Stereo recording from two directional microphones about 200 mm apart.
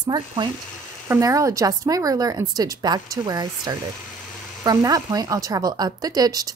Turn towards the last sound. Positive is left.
turn(degrees=-20)  # may be behind; listen again after turning